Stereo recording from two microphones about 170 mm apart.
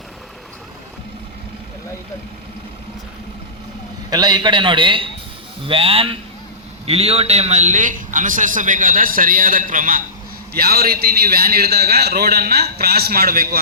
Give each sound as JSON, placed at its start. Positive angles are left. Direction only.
{"t": 4.1, "sound": "a man's voice", "side_deg": -25}
{"t": 10.5, "sound": "a man's voice", "side_deg": -65}